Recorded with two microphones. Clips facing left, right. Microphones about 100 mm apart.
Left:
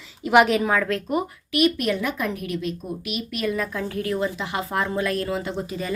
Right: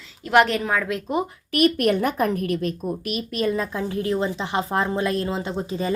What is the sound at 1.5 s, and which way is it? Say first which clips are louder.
A woman's voice: right 2 dB; 50° right (ahead or behind).